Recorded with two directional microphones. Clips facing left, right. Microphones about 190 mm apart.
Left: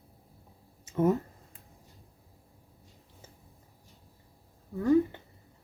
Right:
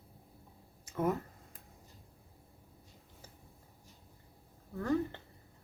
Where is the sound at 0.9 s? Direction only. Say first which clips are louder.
Left 7 dB; 25° left (ahead or behind).